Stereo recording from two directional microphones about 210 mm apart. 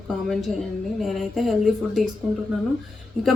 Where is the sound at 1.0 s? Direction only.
Centre (ahead or behind).